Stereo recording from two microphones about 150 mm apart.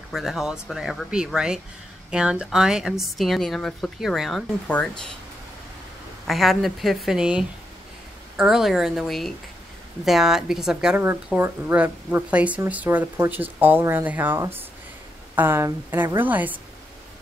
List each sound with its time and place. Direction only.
0.1 s a woman's voice: centre (ahead or behind)
6.2 s a woman's voice: centre (ahead or behind)